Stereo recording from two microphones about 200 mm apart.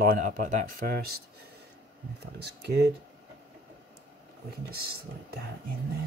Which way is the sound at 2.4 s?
55° right (ahead or behind).